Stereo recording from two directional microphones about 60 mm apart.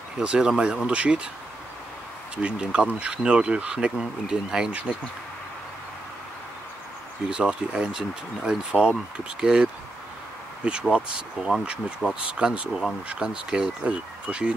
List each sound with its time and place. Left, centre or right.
0.2 s speech: centre
2.3 s speech: centre
7.2 s speech: centre